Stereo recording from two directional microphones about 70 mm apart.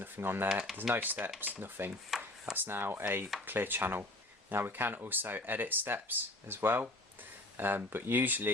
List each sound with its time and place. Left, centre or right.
0.0 s speech: right
2.0 s chopping: centre
2.6 s speech: right